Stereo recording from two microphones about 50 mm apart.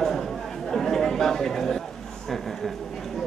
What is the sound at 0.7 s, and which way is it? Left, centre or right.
Chatter, centre.